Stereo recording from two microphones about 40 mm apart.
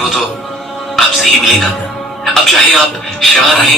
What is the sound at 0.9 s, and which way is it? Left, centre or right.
Music, centre.